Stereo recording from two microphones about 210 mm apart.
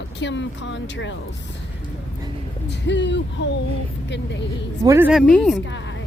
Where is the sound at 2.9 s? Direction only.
60° left (ahead or behind).